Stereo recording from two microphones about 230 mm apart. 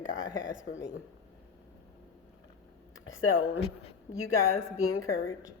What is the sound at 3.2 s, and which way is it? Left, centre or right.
Speech, left.